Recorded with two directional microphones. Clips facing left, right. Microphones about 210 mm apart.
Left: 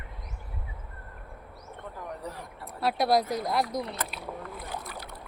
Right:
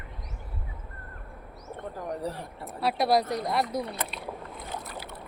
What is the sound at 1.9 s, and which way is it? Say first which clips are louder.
Speech: right 6 dB; 35° right (ahead or behind).